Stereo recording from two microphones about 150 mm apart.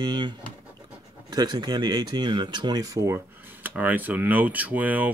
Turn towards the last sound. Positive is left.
turn(degrees=-10)  # may be behind; listen again after turning